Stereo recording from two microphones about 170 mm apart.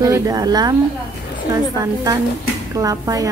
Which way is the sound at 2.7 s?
20° right (ahead or behind).